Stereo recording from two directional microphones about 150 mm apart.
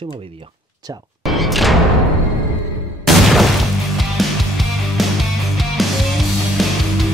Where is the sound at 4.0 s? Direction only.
Centre (ahead or behind).